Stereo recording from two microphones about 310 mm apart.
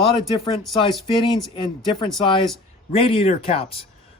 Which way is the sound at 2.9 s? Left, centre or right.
Centre.